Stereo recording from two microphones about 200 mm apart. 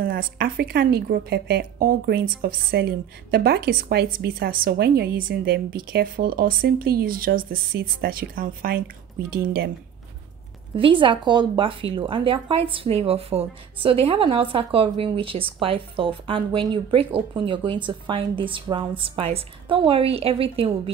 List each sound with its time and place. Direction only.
0.0 s a woman's voice: 45° right (ahead or behind)
10.7 s speech: 25° right (ahead or behind)